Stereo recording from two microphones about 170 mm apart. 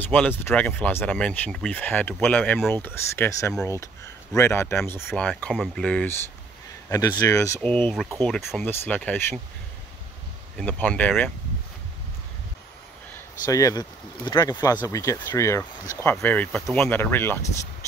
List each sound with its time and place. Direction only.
0.1 s speech: 10° left (ahead or behind)
6.9 s speech: 20° left (ahead or behind)
7.6 s speech: 5° left (ahead or behind)
10.6 s speech: 10° left (ahead or behind)
13.5 s speech: 20° left (ahead or behind)